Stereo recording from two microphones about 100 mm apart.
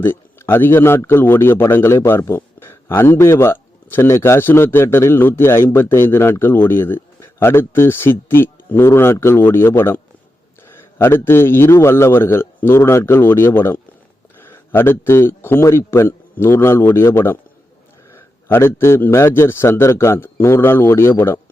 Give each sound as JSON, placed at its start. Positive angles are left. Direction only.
{"t": 0.0, "sound": "a man's voice", "side_deg": 25}